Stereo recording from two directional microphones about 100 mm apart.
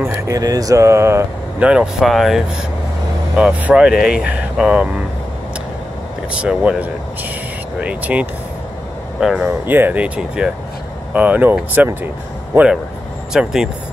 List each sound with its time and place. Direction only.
0.0 s a sound: 25° right (ahead or behind)
0.4 s mantra: 35° right (ahead or behind)
1.6 s speech: 10° right (ahead or behind)
6.4 s speech: 10° right (ahead or behind)
9.7 s speech: 20° right (ahead or behind)
13.3 s speech: 5° right (ahead or behind)